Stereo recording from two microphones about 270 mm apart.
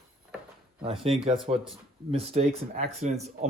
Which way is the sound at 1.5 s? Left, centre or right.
Right.